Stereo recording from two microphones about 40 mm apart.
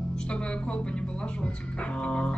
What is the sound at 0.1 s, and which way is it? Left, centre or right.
Speech, left.